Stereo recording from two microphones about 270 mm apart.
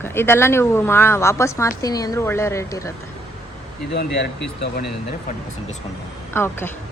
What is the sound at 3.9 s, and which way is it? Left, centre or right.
Speech, left.